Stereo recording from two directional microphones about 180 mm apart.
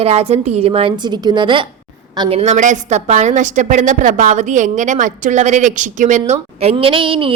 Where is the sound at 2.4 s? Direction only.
40° right (ahead or behind).